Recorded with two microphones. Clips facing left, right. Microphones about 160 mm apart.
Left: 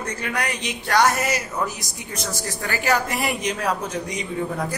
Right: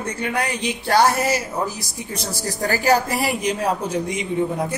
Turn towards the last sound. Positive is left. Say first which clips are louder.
# right 4 dB
turn(degrees=-25)  # may be behind; listen again after turning